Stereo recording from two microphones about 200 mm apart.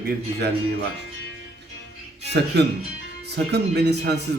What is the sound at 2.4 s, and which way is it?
Speech, 55° right (ahead or behind).